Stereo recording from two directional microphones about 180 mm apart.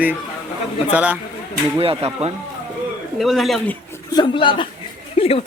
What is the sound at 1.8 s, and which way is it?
Speech, 35° right (ahead or behind).